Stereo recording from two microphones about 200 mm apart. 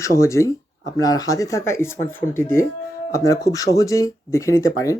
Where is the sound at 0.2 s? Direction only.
15° left (ahead or behind).